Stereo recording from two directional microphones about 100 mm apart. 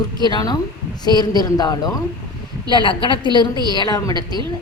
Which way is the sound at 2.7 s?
55° left (ahead or behind).